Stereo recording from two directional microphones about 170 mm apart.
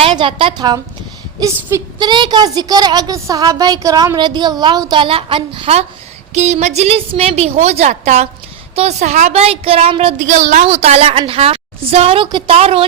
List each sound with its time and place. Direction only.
0.0 s a woman's voice: 30° right (ahead or behind)
10.2 s a woman's voice: 45° right (ahead or behind)